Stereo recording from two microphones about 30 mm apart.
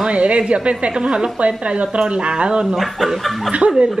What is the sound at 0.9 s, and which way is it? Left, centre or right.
Speech, right.